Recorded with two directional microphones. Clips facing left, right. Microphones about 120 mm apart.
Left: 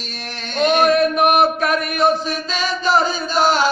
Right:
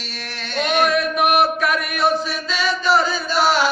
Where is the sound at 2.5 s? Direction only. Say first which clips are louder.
Right 1 dB; 40° left (ahead or behind).